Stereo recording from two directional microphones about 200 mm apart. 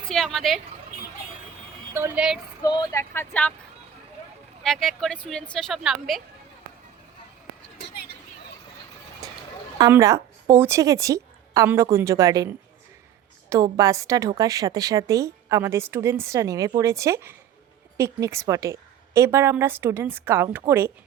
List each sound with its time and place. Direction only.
0.1 s speech: centre (ahead or behind)
1.9 s a woman's voice: 10° right (ahead or behind)
2.6 s speech: 20° left (ahead or behind)
4.6 s speech: centre (ahead or behind)
7.8 s vehicle: 60° left (ahead or behind)
9.7 s a woman's voice: 15° right (ahead or behind)